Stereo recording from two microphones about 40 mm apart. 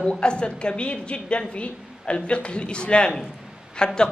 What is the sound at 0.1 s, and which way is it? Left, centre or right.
A man's voice, left.